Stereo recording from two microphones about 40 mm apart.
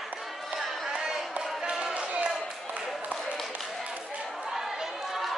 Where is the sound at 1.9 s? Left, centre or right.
Right.